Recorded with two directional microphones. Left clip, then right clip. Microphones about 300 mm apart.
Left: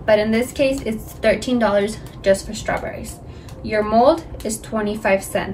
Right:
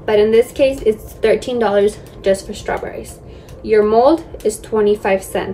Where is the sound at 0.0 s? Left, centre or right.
Centre.